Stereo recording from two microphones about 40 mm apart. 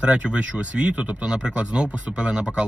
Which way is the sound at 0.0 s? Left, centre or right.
Right.